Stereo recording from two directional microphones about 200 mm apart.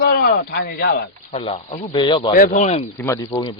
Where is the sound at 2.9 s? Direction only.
15° left (ahead or behind).